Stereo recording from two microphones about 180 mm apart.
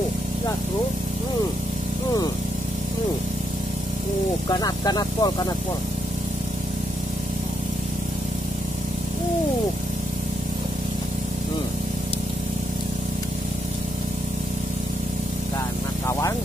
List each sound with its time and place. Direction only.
4.5 s speech: 20° left (ahead or behind)
16.1 s vehicle: 15° left (ahead or behind)